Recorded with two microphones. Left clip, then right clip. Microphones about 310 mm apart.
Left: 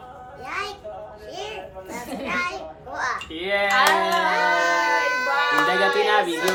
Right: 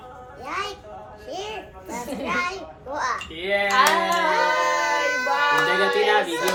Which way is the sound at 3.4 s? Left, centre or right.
Centre.